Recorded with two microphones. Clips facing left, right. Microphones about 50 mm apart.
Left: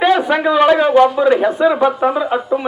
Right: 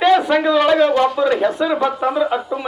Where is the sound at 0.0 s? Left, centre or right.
Centre.